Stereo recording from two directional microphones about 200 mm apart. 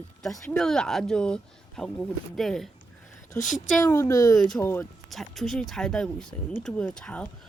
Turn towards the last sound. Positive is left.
turn(degrees=5)  # may be behind; listen again after turning